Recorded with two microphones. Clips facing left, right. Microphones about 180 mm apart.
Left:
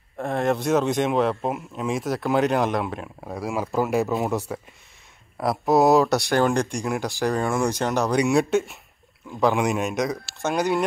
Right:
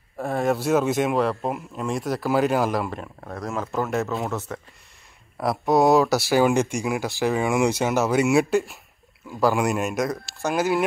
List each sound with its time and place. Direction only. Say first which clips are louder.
0.2 s speech: even; centre (ahead or behind)
3.3 s speech: left 2 dB; 10° left (ahead or behind)
5.4 s speech: even; centre (ahead or behind)